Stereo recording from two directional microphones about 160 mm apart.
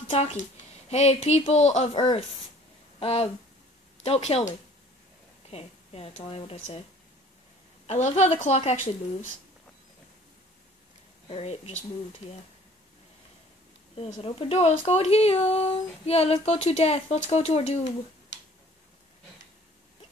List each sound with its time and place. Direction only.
0.1 s speech: 40° left (ahead or behind)
5.5 s speech: 40° left (ahead or behind)
7.8 s a woman's voice: 40° left (ahead or behind)
11.2 s speech: 40° left (ahead or behind)
14.2 s speech: 40° left (ahead or behind)